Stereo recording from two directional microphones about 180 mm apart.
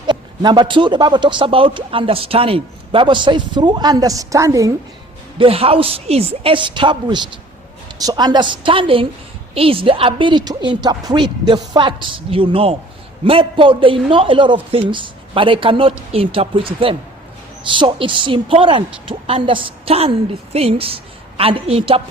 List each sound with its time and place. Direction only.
0.1 s a man's voice: 25° right (ahead or behind)
5.4 s a man's voice: 30° right (ahead or behind)